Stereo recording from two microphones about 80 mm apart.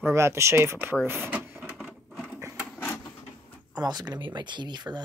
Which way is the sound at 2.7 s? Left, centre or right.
Centre.